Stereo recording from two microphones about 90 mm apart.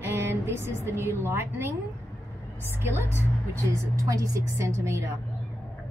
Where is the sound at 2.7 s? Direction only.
30° right (ahead or behind).